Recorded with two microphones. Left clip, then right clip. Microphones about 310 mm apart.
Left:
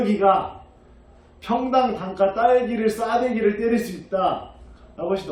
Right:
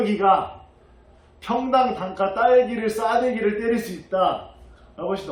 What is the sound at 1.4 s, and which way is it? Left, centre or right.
A man's voice, centre.